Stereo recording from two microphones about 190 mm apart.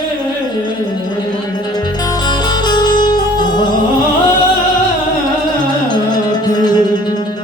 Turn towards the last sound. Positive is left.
turn(degrees=20)  # may be behind; listen again after turning